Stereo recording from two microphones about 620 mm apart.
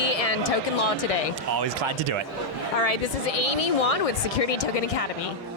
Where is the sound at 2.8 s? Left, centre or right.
Left.